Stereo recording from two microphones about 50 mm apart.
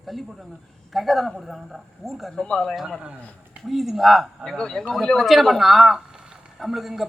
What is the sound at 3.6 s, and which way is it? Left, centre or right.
Speech, centre.